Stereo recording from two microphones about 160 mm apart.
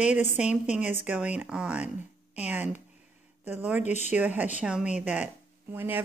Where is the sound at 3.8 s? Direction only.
45° left (ahead or behind).